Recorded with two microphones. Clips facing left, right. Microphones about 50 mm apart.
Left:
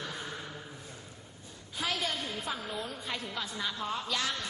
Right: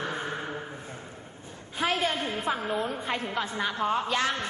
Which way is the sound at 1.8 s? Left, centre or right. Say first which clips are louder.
Right 7 dB; right.